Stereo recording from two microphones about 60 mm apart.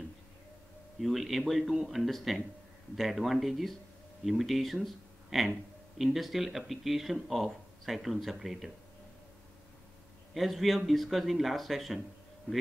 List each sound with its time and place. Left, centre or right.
0.9 s speech: centre
10.3 s speech: centre